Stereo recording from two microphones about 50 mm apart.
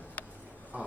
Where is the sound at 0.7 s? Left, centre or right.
Right.